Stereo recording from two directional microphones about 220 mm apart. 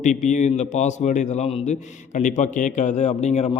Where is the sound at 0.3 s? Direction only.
35° left (ahead or behind).